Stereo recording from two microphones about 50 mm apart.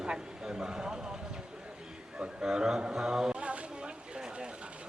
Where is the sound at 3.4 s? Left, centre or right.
Right.